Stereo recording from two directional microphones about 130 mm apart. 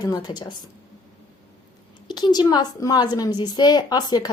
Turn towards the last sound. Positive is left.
turn(degrees=35)  # may be behind; listen again after turning